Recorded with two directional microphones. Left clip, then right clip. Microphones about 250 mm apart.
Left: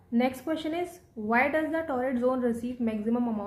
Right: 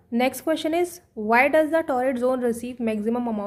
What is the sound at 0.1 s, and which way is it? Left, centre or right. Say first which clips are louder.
A woman's voice: right 6 dB; right.